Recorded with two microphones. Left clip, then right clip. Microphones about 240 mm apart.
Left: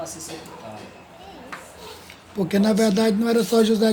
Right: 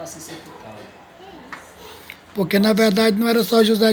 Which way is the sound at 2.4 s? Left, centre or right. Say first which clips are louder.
Right 4 dB; right.